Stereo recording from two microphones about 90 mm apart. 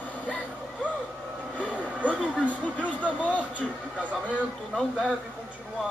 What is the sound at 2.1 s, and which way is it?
Speech, 15° left (ahead or behind).